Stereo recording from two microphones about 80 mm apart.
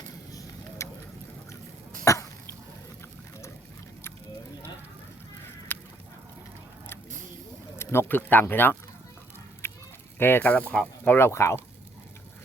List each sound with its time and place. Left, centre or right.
0.3 s vehicle: left
2.0 s cough: left
5.7 s a sound: left
7.8 s speech: left
9.6 s honk: left
10.2 s speech: left
11.1 s speech: left